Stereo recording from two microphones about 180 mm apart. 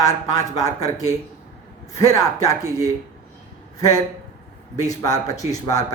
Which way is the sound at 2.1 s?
20° left (ahead or behind).